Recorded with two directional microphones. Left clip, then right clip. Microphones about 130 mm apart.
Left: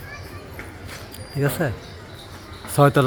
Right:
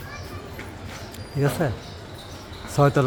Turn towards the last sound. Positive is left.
turn(degrees=30)  # may be behind; listen again after turning